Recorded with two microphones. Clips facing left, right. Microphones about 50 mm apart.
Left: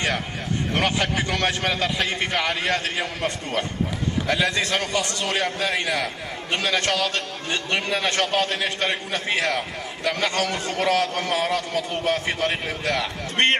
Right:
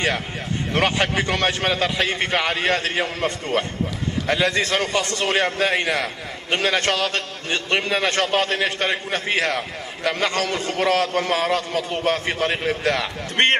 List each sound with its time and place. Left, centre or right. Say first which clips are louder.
0.7 s a man's voice: right 3 dB; right